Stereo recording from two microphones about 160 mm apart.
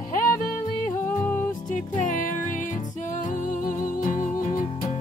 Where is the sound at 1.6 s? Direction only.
55° left (ahead or behind).